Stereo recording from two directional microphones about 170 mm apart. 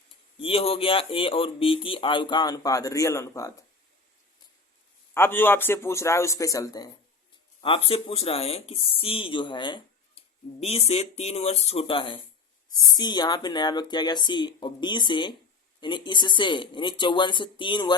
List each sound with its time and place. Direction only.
0.4 s speech: 35° left (ahead or behind); by 3.5 s 20° left (ahead or behind)
5.1 s speech: 15° left (ahead or behind)
7.6 s speech: 30° left (ahead or behind)